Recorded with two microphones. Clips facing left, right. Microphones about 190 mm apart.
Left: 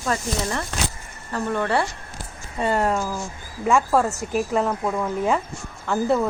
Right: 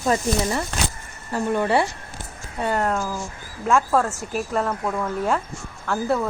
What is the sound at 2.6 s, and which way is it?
Speech, centre (ahead or behind).